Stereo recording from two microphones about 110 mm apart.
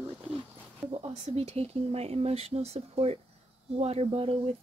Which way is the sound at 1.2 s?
70° right (ahead or behind).